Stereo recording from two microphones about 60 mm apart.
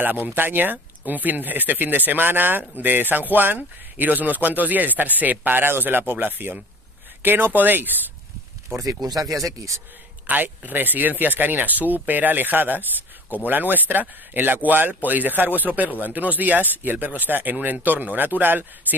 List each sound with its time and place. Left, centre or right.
0.0 s speech: right
8.7 s speech: right
10.2 s speech: right